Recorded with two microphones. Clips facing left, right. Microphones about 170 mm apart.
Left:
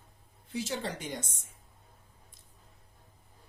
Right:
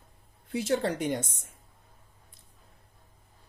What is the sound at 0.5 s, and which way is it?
Speech, 60° right (ahead or behind).